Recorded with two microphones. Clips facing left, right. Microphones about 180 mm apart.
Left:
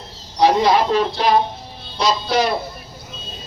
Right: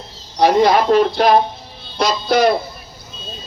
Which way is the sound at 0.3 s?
50° right (ahead or behind).